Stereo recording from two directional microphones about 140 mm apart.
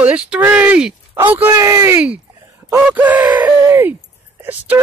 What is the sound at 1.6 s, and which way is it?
Speech, 20° right (ahead or behind).